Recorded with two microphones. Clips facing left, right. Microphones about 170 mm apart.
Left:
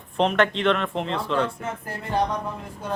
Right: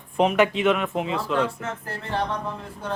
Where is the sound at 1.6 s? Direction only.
10° left (ahead or behind).